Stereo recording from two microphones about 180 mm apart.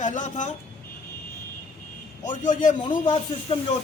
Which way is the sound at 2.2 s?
45° left (ahead or behind).